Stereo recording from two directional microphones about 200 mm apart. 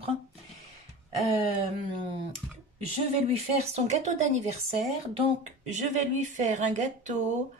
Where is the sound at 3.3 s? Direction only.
35° right (ahead or behind).